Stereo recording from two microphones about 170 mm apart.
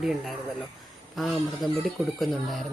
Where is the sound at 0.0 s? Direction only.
Centre (ahead or behind).